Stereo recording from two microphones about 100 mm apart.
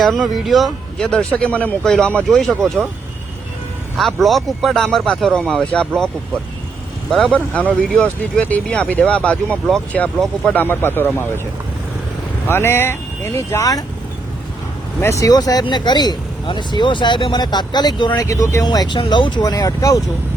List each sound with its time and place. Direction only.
0.0 s speech: centre (ahead or behind)
3.9 s speech: centre (ahead or behind)
7.1 s speech: 5° left (ahead or behind); by 11.3 s 20° left (ahead or behind)
12.5 s speech: 25° left (ahead or behind)
15.2 s speech: 40° left (ahead or behind)
18.2 s speech: 30° left (ahead or behind)
18.6 s speech: 45° left (ahead or behind)